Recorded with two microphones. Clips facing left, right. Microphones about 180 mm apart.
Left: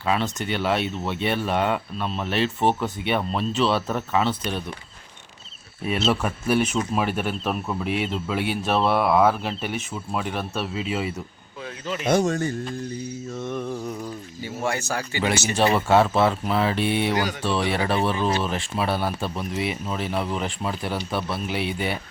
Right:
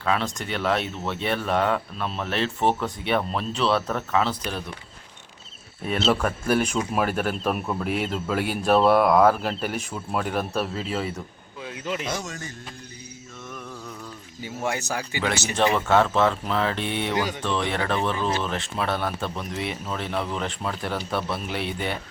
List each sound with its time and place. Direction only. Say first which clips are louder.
0.0 s speech: left 1 dB; 5° left (ahead or behind)
5.8 s speech: even; 5° left (ahead or behind)
10.8 s speech: left 1 dB; 10° left (ahead or behind)
12.0 s speech: left 11 dB; 55° left (ahead or behind)
13.4 s mantra: left 9 dB; 30° left (ahead or behind)
14.4 s speech: left 1 dB; 15° right (ahead or behind)
15.4 s speech: left 1 dB; 5° left (ahead or behind)